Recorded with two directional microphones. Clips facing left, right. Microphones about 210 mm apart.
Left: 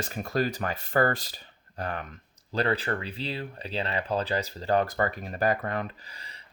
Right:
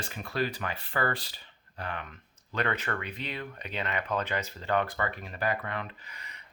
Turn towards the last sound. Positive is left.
turn(degrees=35)  # may be behind; listen again after turning